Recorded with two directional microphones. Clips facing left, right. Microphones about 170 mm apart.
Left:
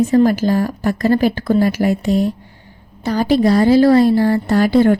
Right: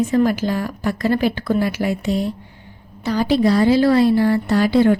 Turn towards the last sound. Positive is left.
turn(degrees=45)  # may be behind; listen again after turning